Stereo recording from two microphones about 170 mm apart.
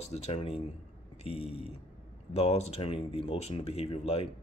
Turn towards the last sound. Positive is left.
turn(degrees=40)  # may be behind; listen again after turning